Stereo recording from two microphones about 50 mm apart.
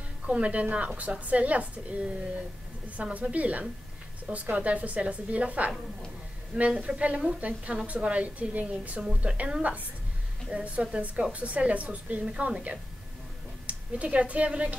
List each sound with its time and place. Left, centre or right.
0.3 s a woman's voice: right
9.0 s a woman's voice: centre
9.4 s a woman's voice: right